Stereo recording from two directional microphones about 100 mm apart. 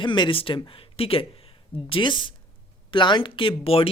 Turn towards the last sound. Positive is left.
turn(degrees=70)  # may be behind; listen again after turning